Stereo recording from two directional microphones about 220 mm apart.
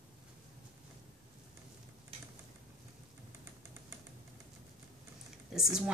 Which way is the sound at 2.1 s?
25° right (ahead or behind).